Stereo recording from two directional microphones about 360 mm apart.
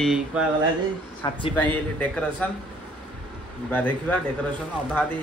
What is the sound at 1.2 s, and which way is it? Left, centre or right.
Speech, centre.